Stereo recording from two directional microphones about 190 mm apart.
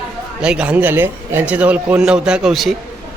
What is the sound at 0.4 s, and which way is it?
Speech, 5° right (ahead or behind).